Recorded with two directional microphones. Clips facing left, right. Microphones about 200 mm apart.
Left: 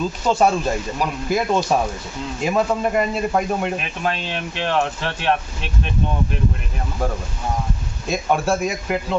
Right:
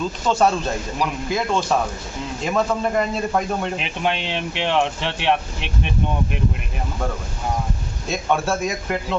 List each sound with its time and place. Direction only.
0.3 s a man's voice: 10° left (ahead or behind)
3.8 s speech: 20° right (ahead or behind)
8.1 s a man's voice: 10° left (ahead or behind)